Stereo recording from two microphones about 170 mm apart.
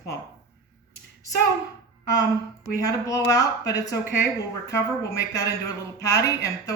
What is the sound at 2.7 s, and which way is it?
A man's voice, 20° left (ahead or behind).